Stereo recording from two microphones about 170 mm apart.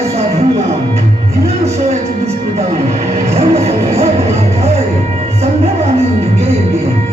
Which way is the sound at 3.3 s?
35° right (ahead or behind).